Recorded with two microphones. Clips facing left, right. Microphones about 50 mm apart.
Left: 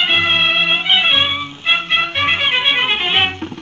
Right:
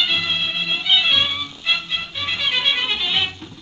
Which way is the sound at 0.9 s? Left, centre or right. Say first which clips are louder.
Left 1 dB; left.